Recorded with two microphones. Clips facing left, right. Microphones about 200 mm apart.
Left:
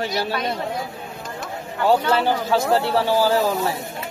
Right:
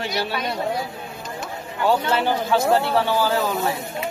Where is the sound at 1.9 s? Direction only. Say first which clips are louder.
Left 2 dB; 35° left (ahead or behind).